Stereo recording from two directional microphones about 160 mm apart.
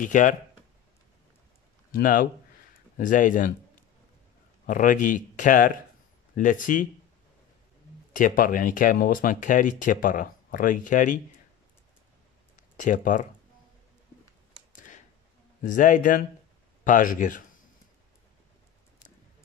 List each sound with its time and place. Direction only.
0.0 s speech: 55° left (ahead or behind)
1.9 s speech: 60° left (ahead or behind)
4.6 s speech: 55° left (ahead or behind)
8.1 s speech: 55° left (ahead or behind)
12.5 s speech: 50° left (ahead or behind)
14.7 s a sound: 55° left (ahead or behind)
15.6 s speech: 55° left (ahead or behind)